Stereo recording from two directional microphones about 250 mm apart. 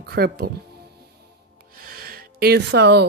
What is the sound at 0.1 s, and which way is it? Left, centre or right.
Speech, right.